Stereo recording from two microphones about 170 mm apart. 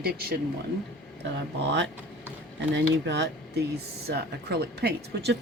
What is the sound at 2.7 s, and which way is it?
Speech, 90° right.